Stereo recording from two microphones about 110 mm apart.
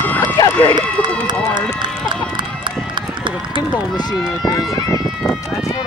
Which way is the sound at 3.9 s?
40° left (ahead or behind).